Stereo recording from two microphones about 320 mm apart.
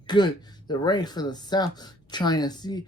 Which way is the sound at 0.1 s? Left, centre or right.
Centre.